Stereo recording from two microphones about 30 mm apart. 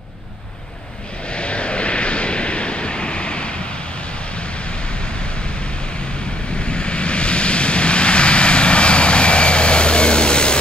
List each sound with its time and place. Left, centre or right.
1.3 s vehicle: left
6.7 s vehicle: left